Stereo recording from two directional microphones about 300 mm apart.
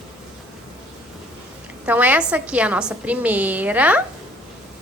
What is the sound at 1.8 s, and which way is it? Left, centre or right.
A woman's voice, centre.